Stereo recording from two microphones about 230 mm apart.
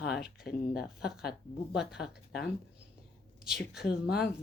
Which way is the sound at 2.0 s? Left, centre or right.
Left.